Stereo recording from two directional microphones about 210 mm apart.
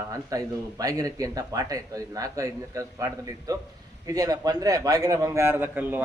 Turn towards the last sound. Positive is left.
turn(degrees=-10)  # may be behind; listen again after turning